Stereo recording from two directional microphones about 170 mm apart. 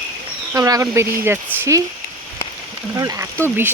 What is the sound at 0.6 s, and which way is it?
Speech, 20° right (ahead or behind).